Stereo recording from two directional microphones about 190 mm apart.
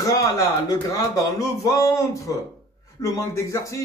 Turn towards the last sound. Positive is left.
turn(degrees=15)  # may be behind; listen again after turning